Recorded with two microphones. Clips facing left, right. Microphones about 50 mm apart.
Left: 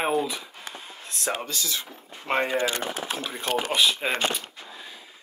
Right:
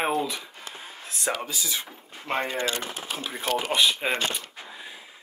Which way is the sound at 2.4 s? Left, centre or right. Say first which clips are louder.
Left 3 dB; left.